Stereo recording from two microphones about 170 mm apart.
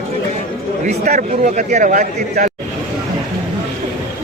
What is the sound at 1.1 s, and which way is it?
A man's voice, 45° right (ahead or behind).